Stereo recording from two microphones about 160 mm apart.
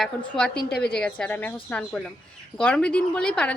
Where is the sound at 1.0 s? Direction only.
5° left (ahead or behind).